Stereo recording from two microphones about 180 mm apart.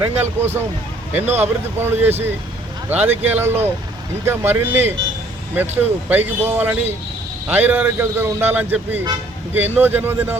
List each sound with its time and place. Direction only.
0.0 s a man's voice: 10° right (ahead or behind)
1.2 s speech: 35° right (ahead or behind)
1.8 s a man's voice: 10° right (ahead or behind)